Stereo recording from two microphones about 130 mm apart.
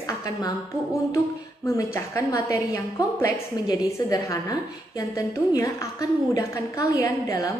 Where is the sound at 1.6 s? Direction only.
20° left (ahead or behind).